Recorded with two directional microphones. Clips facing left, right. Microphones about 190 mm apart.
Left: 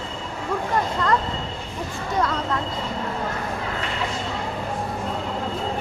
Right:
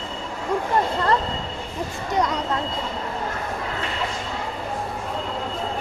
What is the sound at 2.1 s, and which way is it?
Speech, 20° right (ahead or behind).